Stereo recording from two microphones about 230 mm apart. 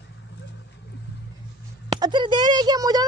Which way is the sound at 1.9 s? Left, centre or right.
Centre.